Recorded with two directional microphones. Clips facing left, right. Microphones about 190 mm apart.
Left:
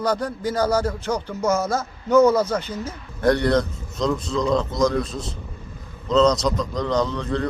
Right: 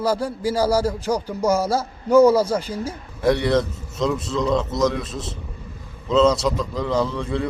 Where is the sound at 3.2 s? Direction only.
5° right (ahead or behind).